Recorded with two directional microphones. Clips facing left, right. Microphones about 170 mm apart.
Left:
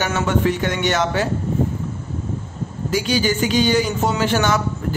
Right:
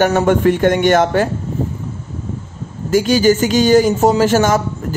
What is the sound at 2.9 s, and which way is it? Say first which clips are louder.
A man's voice: right 8 dB; 45° right (ahead or behind).